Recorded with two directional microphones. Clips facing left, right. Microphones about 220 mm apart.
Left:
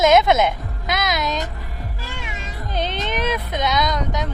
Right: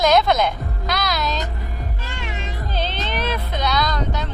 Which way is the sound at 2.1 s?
Centre (ahead or behind).